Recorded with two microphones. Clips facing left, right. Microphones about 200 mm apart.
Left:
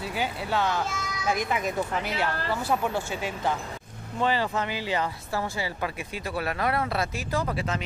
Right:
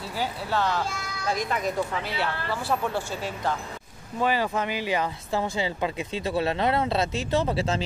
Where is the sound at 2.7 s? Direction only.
5° left (ahead or behind).